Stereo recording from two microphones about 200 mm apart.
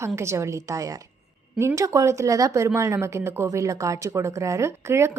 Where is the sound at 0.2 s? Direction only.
15° right (ahead or behind).